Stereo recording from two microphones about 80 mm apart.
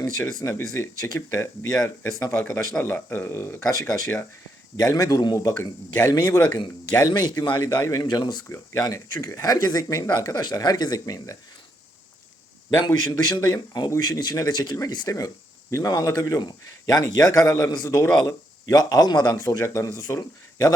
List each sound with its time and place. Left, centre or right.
0.0 s speech: left
2.7 s speech: left
7.1 s a man's voice: left
7.8 s speech: left
8.0 s a man's voice: left
8.4 s speech: left
8.8 s speech: left
12.8 s a man's voice: left